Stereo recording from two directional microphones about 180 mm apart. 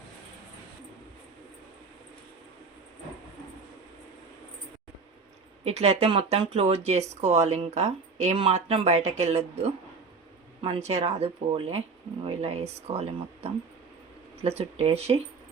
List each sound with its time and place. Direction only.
5.6 s speech: 35° right (ahead or behind)
10.8 s speech: 35° right (ahead or behind)